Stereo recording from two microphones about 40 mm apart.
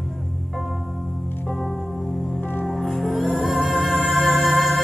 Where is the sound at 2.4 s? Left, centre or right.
Left.